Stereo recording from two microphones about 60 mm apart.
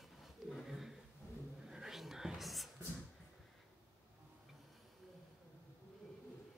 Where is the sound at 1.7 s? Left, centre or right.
Centre.